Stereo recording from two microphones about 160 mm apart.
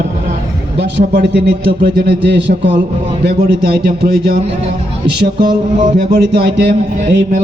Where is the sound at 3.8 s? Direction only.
75° right (ahead or behind).